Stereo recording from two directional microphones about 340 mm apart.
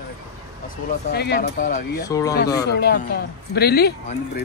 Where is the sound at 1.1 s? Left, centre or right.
Left.